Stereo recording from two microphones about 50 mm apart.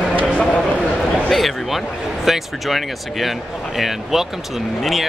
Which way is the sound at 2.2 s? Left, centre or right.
Centre.